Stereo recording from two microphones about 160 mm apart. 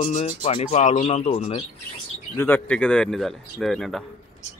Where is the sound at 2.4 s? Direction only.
10° left (ahead or behind).